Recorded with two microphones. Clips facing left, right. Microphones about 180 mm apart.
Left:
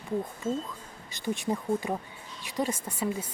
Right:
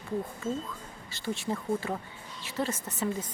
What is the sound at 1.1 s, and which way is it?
Speech, 15° left (ahead or behind).